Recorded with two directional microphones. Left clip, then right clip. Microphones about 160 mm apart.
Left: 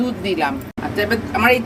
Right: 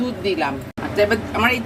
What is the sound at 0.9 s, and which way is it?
Speech, 20° left (ahead or behind).